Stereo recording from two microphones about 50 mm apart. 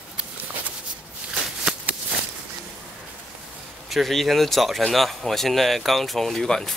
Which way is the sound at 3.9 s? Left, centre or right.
Centre.